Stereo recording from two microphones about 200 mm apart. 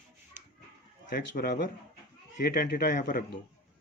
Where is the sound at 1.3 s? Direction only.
50° left (ahead or behind).